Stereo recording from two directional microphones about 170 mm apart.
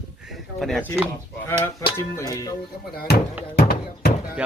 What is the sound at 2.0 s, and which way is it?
Speech, 20° left (ahead or behind).